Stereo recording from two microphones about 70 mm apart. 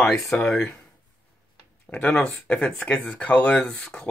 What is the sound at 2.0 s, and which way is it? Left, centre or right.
Speech, centre.